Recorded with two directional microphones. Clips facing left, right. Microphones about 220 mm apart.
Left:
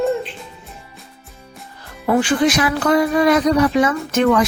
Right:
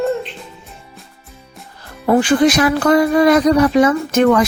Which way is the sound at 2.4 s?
40° right (ahead or behind).